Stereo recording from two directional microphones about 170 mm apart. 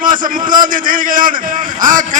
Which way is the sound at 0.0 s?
55° right (ahead or behind).